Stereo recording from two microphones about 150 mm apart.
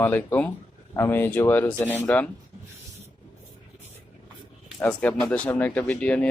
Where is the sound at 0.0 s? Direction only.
10° left (ahead or behind).